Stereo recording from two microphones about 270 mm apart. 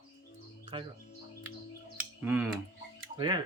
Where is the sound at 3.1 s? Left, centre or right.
Centre.